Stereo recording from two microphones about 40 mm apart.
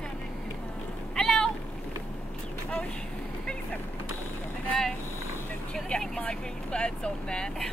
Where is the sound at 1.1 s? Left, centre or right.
Centre.